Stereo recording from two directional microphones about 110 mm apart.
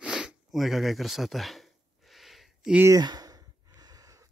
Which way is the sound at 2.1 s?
Centre (ahead or behind).